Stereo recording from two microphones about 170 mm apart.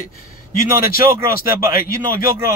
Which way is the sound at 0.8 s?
60° left (ahead or behind).